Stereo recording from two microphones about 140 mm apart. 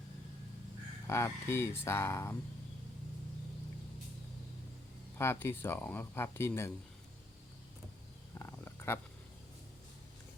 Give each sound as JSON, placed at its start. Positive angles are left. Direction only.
{"t": 1.0, "sound": "speech", "side_deg": 20}
{"t": 5.1, "sound": "speech", "side_deg": 20}
{"t": 8.4, "sound": "a sound", "side_deg": 20}